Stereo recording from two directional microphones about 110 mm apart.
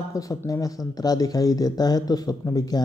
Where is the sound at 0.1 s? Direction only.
30° left (ahead or behind).